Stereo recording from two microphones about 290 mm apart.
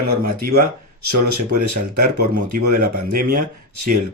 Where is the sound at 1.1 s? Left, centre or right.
Right.